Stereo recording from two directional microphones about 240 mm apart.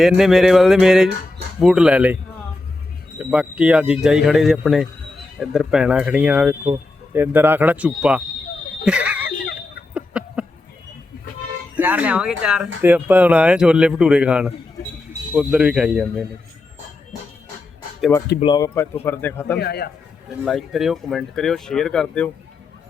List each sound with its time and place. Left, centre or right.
0.0 s speech: centre
3.2 s speech: centre
9.9 s a sound: centre
11.8 s speech: centre
18.3 s speech: centre
19.5 s a man's voice: left
20.4 s speech: centre